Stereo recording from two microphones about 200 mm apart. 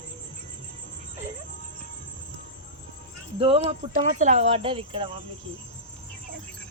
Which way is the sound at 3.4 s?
30° right (ahead or behind).